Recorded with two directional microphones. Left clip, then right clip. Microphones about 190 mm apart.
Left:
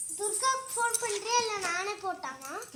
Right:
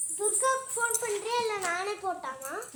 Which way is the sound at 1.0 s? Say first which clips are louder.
Even; 45° left (ahead or behind).